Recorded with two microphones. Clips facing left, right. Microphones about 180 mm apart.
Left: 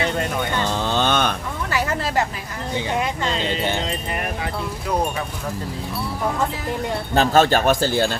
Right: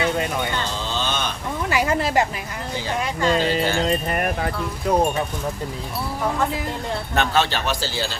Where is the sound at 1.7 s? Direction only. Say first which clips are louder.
Right 2 dB; 15° right (ahead or behind).